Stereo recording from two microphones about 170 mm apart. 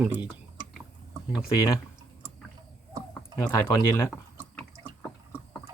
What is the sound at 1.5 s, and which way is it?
Speech, 20° left (ahead or behind).